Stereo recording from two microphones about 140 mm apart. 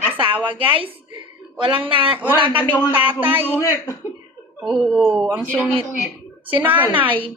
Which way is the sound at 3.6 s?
20° left (ahead or behind).